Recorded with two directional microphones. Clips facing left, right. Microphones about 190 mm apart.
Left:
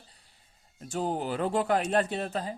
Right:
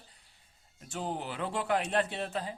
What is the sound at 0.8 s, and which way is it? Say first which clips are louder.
Speech: left 6 dB; 40° left (ahead or behind).